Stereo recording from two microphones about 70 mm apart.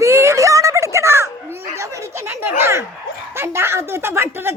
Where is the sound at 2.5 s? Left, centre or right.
Right.